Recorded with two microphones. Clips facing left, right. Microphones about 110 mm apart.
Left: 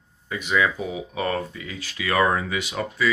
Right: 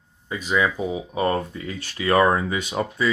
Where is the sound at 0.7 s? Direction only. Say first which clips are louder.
Right 3 dB; 30° right (ahead or behind).